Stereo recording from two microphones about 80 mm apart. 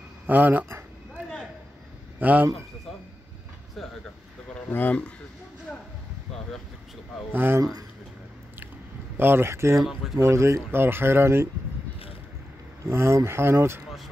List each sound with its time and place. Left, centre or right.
0.3 s speech: right
2.1 s a man's voice: right
4.6 s speech: left
7.3 s speech: right
9.1 s speech: right
12.8 s speech: right